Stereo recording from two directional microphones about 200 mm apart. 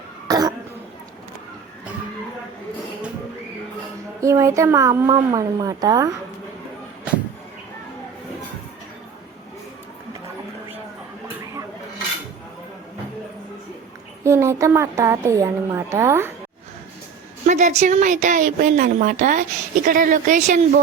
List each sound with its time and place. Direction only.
0.3 s cough: 20° right (ahead or behind)
4.2 s a woman's voice: 15° right (ahead or behind)
14.3 s a woman's voice: 15° right (ahead or behind)
17.4 s a woman's voice: 35° right (ahead or behind)